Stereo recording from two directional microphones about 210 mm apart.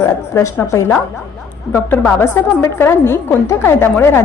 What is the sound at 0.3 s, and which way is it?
A woman's voice, 10° left (ahead or behind).